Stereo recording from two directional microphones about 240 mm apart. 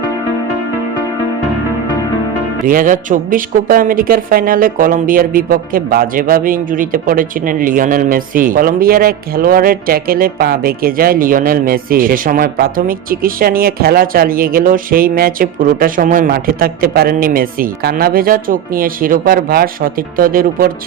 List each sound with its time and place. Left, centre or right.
2.6 s speech: right